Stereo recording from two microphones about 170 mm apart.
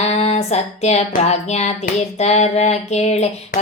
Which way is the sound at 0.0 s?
40° left (ahead or behind).